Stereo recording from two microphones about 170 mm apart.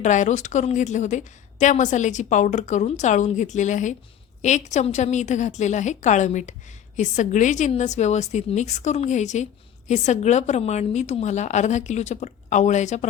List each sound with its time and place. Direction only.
0.0 s a woman's voice: 45° left (ahead or behind)